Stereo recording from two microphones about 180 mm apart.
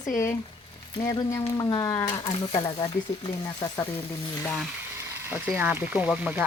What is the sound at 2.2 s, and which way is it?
Speech, 30° left (ahead or behind).